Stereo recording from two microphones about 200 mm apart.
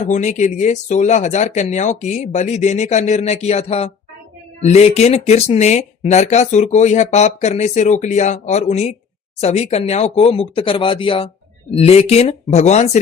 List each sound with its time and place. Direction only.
0.1 s speech: 35° left (ahead or behind)